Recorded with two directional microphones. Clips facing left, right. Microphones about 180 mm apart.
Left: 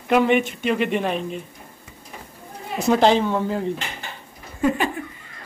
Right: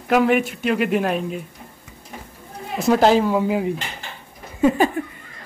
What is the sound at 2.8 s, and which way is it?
Speech, 5° right (ahead or behind).